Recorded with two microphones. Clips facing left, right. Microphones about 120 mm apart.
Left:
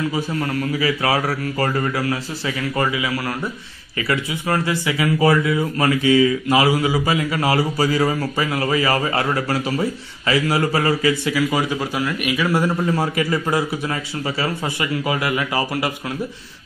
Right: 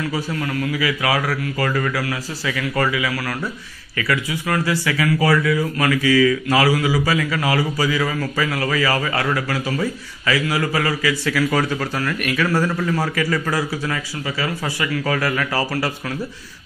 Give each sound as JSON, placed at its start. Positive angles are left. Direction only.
{"t": 0.4, "sound": "speech", "side_deg": 35}
{"t": 11.3, "sound": "speech", "side_deg": 15}